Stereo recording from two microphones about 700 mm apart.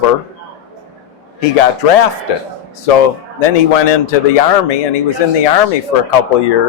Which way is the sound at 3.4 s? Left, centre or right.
Left.